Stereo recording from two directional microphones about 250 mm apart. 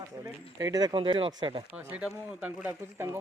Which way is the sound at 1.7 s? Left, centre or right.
Centre.